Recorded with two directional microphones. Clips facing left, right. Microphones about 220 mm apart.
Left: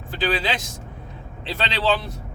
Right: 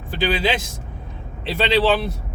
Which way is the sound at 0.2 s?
10° right (ahead or behind).